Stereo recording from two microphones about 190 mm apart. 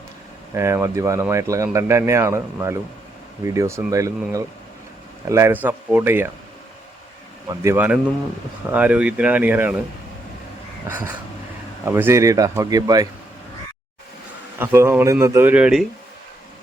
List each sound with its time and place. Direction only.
0.5 s speech: 15° right (ahead or behind)
7.4 s speech: 15° right (ahead or behind)
10.8 s speech: 10° right (ahead or behind)
14.6 s speech: 10° right (ahead or behind)